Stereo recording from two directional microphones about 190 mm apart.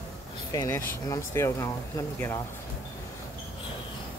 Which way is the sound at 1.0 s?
15° left (ahead or behind).